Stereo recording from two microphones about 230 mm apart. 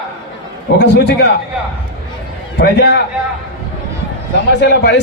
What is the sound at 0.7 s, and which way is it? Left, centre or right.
Speech, left.